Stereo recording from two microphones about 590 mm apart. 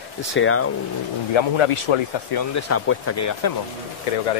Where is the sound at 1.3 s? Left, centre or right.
Left.